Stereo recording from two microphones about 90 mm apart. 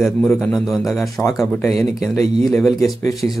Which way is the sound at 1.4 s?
5° left (ahead or behind).